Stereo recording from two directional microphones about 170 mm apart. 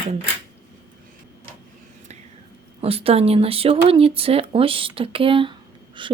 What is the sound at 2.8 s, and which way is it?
Speech, 35° right (ahead or behind).